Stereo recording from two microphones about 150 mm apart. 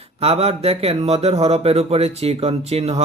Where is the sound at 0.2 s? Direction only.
40° right (ahead or behind).